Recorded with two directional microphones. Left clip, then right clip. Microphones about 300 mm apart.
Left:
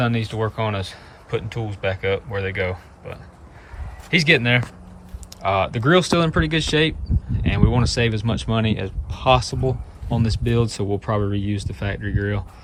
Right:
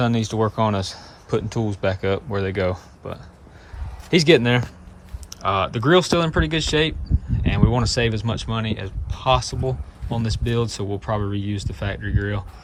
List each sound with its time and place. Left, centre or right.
0.0 s speech: centre
1.5 s speech: right
1.8 s speech: centre